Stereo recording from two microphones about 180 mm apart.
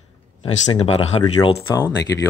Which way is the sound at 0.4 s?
35° left (ahead or behind).